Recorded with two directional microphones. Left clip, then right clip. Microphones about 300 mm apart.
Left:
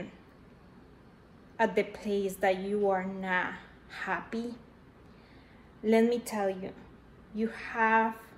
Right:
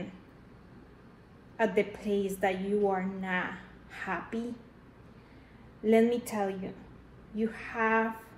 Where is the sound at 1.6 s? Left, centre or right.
Centre.